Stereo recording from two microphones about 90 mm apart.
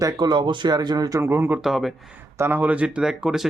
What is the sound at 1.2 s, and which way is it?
Speech, 25° right (ahead or behind).